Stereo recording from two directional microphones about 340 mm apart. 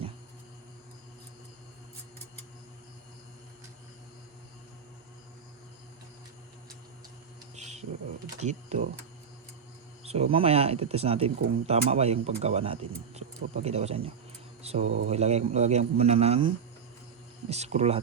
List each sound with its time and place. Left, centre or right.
7.5 s a sound: centre
8.4 s speech: centre
10.0 s speech: centre
17.5 s speech: centre